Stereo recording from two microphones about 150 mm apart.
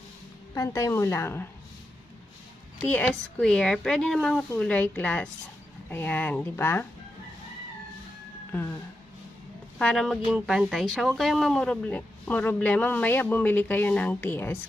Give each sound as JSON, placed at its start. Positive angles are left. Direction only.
{"t": 0.6, "sound": "a woman's voice", "side_deg": 20}
{"t": 2.9, "sound": "speech", "side_deg": 5}
{"t": 8.5, "sound": "speech", "side_deg": 15}
{"t": 9.8, "sound": "speech", "side_deg": 5}